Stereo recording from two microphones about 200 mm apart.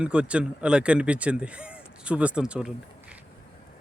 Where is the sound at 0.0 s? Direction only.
5° right (ahead or behind).